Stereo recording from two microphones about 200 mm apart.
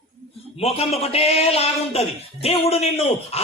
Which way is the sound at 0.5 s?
30° left (ahead or behind).